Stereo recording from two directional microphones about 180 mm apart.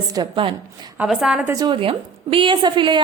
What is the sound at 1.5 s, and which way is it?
A woman's voice, 25° right (ahead or behind).